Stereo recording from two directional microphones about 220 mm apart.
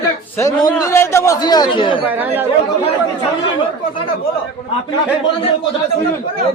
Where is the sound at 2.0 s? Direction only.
10° right (ahead or behind).